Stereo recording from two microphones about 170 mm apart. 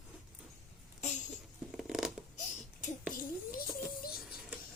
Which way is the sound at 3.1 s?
55° left (ahead or behind).